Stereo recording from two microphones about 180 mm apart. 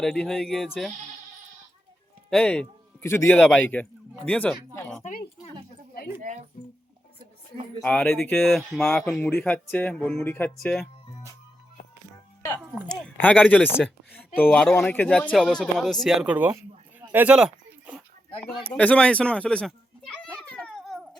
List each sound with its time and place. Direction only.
0.0 s speech: 5° left (ahead or behind)
2.3 s a man's voice: 5° left (ahead or behind)
5.0 s a sound: 55° left (ahead or behind)
6.6 s music: 50° left (ahead or behind)
7.8 s speech: 5° left (ahead or behind)
13.1 s speech: 5° left (ahead or behind); by 16.6 s 10° right (ahead or behind)
17.0 s a sound: 10° right (ahead or behind)
18.8 s speech: 5° left (ahead or behind)
20.5 s cat: 5° left (ahead or behind)